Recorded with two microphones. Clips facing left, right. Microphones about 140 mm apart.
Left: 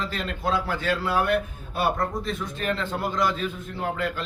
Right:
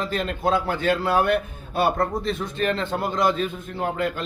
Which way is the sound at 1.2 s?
25° right (ahead or behind).